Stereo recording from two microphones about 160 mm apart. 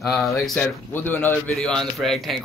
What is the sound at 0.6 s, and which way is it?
Speech, 10° left (ahead or behind).